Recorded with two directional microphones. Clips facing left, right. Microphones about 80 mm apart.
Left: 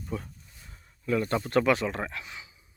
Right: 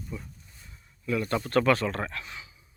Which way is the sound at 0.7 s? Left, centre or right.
Left.